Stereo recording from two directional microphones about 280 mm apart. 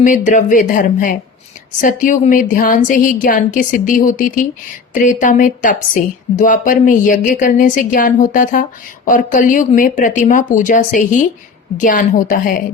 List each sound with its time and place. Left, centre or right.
0.0 s a woman's voice: left